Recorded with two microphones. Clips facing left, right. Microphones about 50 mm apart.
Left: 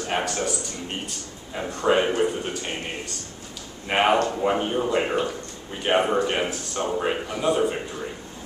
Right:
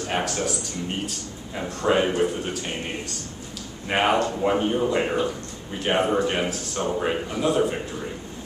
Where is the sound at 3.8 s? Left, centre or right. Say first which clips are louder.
Left 1 dB; centre.